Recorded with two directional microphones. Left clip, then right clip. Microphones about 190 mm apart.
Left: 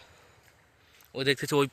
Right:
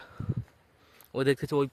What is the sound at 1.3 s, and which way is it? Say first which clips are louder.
Speech: left 2 dB; 10° right (ahead or behind).